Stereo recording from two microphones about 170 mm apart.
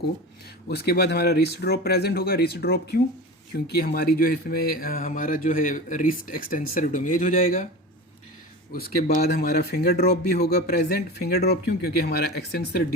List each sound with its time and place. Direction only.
0.7 s speech: 70° left (ahead or behind); by 7.7 s 50° left (ahead or behind)
8.7 s speech: 60° left (ahead or behind)